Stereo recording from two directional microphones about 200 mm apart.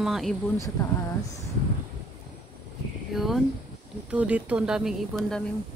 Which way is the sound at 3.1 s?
Centre (ahead or behind).